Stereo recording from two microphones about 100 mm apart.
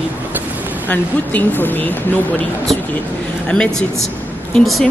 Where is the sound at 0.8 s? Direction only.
20° left (ahead or behind).